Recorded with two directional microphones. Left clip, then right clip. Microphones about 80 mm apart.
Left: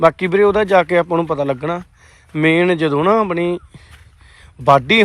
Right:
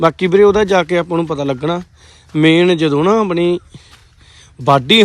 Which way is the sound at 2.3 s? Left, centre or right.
Right.